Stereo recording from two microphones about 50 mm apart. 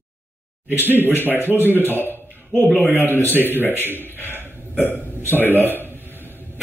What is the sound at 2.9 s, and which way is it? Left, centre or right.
Speech, right.